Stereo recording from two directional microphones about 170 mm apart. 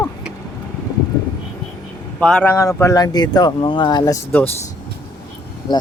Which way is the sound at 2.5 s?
20° left (ahead or behind).